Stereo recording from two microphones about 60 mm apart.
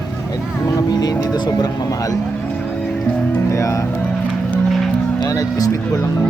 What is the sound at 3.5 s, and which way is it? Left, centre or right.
Speech, left.